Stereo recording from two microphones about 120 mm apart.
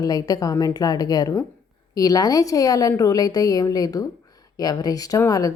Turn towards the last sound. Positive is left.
turn(degrees=30)  # may be behind; listen again after turning